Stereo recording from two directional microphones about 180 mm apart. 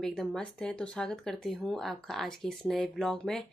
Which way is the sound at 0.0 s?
Centre (ahead or behind).